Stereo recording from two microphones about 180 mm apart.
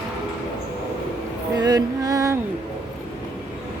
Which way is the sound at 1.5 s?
20° right (ahead or behind).